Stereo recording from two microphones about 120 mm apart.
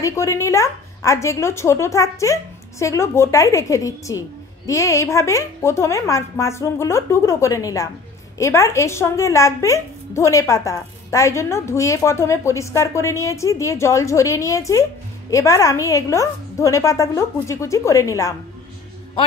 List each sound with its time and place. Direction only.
0.0 s a woman's voice: 25° left (ahead or behind)